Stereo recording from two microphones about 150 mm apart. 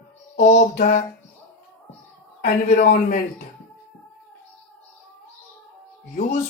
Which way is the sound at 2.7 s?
65° left (ahead or behind).